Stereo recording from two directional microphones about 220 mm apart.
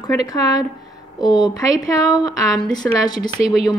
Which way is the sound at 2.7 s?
15° left (ahead or behind).